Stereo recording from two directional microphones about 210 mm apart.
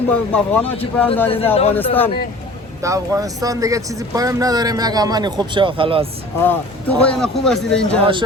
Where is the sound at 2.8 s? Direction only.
15° right (ahead or behind).